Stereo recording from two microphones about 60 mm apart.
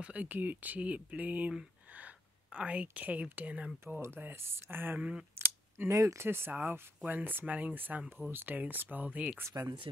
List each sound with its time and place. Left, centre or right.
0.0 s speech: right
4.0 s speech: right
5.3 s a sound: right
5.9 s speech: right
6.2 s speech: right
9.5 s speech: right